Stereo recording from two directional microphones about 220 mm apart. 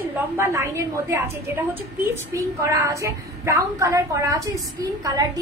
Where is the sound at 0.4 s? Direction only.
15° right (ahead or behind).